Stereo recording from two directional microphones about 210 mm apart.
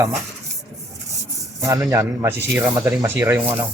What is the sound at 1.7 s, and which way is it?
Speech, 15° right (ahead or behind).